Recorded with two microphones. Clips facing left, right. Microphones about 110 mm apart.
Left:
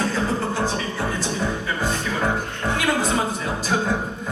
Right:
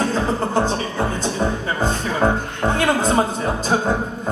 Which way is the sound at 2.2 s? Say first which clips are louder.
Right 8 dB; 40° right (ahead or behind).